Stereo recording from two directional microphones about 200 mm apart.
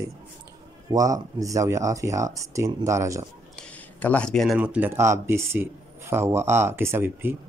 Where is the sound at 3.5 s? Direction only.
5° left (ahead or behind).